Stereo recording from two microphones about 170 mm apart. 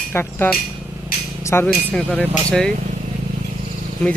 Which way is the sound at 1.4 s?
15° left (ahead or behind).